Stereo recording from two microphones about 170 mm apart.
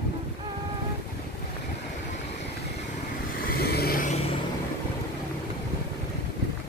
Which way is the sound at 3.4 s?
65° left (ahead or behind).